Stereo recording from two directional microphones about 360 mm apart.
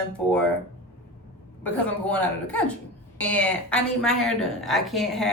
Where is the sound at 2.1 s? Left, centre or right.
Centre.